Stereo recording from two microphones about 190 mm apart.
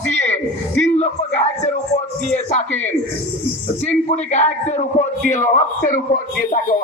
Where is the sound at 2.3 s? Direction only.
35° left (ahead or behind).